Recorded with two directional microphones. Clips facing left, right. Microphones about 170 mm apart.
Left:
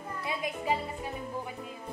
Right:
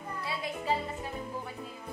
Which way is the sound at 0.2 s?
15° left (ahead or behind).